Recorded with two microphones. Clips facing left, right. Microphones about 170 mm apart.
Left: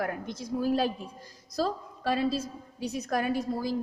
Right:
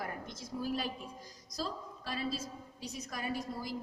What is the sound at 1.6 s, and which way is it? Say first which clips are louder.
A woman's voice: left 10 dB; 65° left (ahead or behind).